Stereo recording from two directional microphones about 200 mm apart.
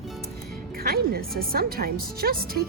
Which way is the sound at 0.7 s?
50° right (ahead or behind).